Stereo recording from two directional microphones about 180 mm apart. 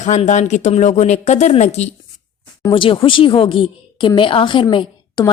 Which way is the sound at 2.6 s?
25° left (ahead or behind).